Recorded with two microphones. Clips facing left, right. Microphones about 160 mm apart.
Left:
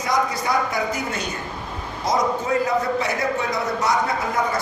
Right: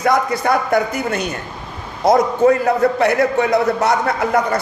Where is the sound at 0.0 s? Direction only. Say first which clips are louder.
Right 6 dB; 60° right (ahead or behind).